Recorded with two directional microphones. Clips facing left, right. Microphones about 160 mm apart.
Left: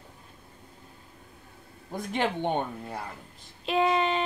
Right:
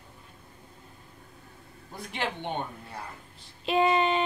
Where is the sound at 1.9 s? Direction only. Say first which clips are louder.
Left 5 dB; 45° left (ahead or behind).